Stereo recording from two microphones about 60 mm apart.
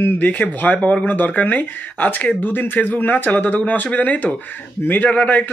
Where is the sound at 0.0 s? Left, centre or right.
Left.